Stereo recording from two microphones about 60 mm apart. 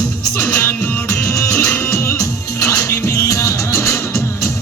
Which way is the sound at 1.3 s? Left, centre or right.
Left.